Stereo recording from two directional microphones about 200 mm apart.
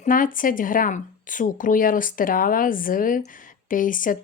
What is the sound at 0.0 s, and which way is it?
Speech, 45° left (ahead or behind).